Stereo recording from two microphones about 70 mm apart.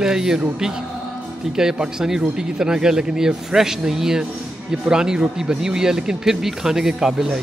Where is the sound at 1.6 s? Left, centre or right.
Centre.